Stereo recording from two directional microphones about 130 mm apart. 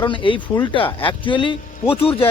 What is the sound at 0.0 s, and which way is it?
Speech, 40° left (ahead or behind).